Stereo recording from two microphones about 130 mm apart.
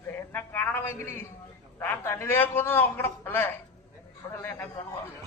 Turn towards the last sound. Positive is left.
turn(degrees=15)  # may be behind; listen again after turning